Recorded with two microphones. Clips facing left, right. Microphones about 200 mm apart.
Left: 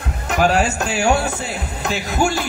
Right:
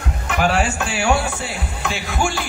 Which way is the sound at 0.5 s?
40° left (ahead or behind).